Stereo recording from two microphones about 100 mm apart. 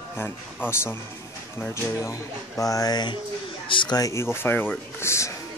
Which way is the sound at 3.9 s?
30° left (ahead or behind).